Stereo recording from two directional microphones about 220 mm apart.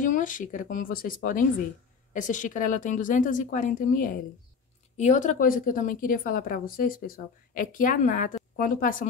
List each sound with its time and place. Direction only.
0.0 s a woman's voice: 35° left (ahead or behind)